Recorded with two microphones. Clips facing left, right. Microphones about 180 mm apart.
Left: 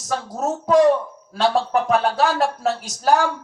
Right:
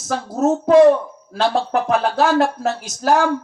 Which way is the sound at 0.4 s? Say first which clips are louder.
Right 5 dB; 60° right (ahead or behind).